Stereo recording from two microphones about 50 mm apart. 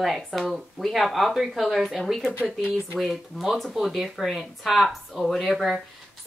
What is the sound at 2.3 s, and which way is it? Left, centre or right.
Speech, right.